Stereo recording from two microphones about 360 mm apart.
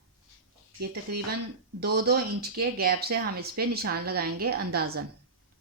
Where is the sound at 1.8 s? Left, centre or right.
Right.